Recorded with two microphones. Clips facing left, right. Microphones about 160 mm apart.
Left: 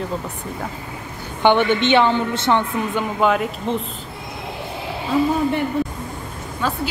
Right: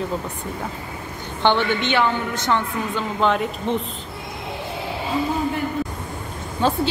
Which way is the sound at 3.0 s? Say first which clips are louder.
Left 2 dB; 5° left (ahead or behind).